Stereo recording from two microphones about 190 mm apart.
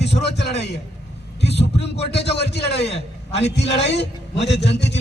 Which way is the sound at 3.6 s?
35° left (ahead or behind).